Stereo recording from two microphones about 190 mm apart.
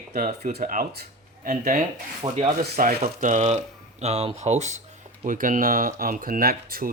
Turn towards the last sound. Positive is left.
turn(degrees=-50)  # may be behind; listen again after turning